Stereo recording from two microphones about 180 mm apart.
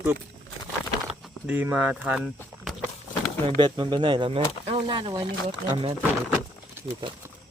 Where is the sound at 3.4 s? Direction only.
25° right (ahead or behind).